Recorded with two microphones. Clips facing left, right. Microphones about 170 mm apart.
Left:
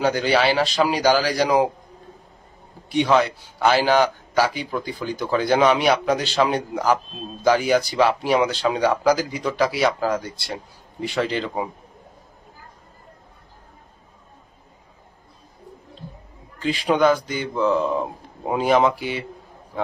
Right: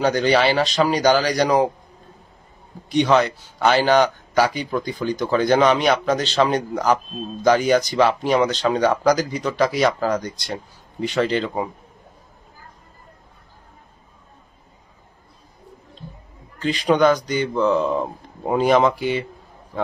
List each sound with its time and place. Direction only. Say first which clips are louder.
0.0 s speech: right 2 dB; 5° left (ahead or behind)
2.9 s speech: right 1 dB; 5° left (ahead or behind)
16.6 s speech: right 2 dB; 5° left (ahead or behind)